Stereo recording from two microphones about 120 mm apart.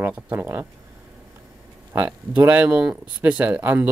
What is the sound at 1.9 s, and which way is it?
Speech, 15° right (ahead or behind).